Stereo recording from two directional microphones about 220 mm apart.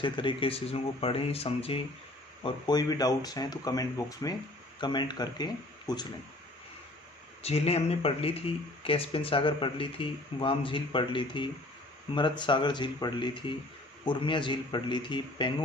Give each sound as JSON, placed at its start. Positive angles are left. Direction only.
{"t": 0.0, "sound": "speech", "side_deg": 20}
{"t": 7.4, "sound": "speech", "side_deg": 30}